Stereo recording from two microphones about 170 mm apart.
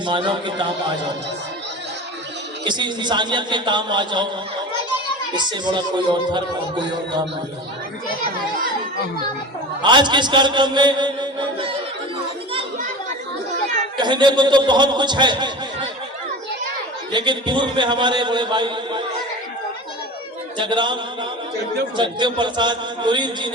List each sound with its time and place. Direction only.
0.0 s a man's voice: 30° right (ahead or behind)
2.6 s a man's voice: 25° right (ahead or behind)
5.4 s a man's voice: 25° right (ahead or behind)
9.8 s a man's voice: 25° right (ahead or behind)
13.9 s a man's voice: 25° right (ahead or behind)
17.1 s a man's voice: 25° right (ahead or behind)
20.6 s a man's voice: 25° right (ahead or behind)